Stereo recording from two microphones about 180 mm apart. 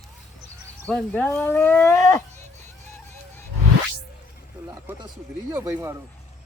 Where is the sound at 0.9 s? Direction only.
5° left (ahead or behind).